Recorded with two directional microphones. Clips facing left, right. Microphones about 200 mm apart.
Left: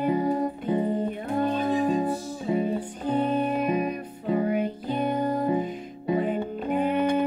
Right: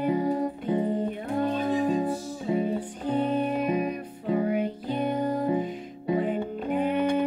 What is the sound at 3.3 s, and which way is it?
Music, 45° left (ahead or behind).